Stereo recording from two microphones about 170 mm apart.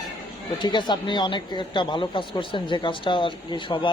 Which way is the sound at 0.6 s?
25° left (ahead or behind).